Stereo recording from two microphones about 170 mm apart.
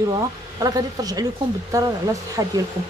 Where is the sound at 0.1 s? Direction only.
20° right (ahead or behind).